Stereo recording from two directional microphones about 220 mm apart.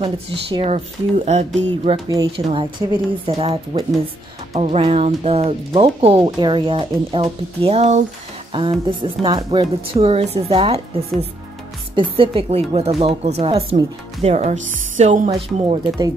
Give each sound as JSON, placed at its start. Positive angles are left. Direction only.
{"t": 0.0, "sound": "speech", "side_deg": -25}
{"t": 2.0, "sound": "speech", "side_deg": -15}
{"t": 9.0, "sound": "speech", "side_deg": -20}